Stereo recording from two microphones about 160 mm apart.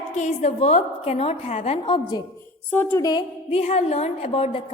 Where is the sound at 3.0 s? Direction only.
30° left (ahead or behind).